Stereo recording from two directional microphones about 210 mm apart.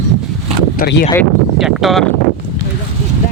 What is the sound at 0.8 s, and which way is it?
Speech, 50° left (ahead or behind).